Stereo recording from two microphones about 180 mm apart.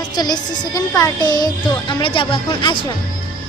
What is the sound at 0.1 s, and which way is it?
A woman's voice, 20° left (ahead or behind).